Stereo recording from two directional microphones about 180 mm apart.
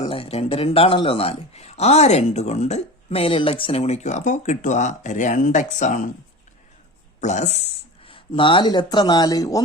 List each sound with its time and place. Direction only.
0.0 s speech: 30° left (ahead or behind)
7.2 s speech: 40° left (ahead or behind); by 9.6 s 20° left (ahead or behind)